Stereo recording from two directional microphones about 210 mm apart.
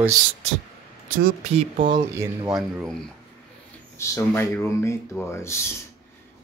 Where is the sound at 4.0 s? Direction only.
10° left (ahead or behind).